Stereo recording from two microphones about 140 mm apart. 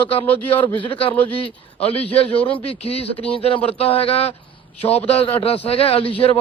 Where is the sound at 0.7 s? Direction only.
35° left (ahead or behind).